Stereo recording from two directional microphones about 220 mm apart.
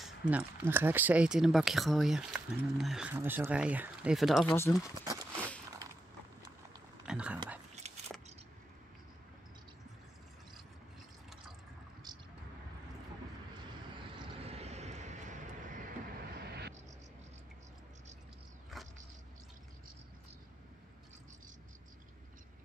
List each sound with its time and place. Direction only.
0.0 s speech: 5° right (ahead or behind)
4.6 s speech: 15° left (ahead or behind)
5.0 s a sound: 15° right (ahead or behind)
7.1 s speech: 5° right (ahead or behind)
14.4 s vehicle: 30° right (ahead or behind)
18.7 s a sound: centre (ahead or behind)